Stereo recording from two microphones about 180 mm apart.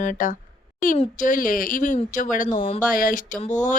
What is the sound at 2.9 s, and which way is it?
Speech, 50° left (ahead or behind).